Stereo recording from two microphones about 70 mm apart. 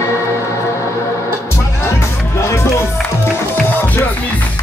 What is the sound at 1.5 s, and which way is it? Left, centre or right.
Music, left.